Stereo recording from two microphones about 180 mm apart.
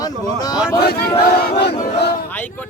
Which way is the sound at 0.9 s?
60° left (ahead or behind).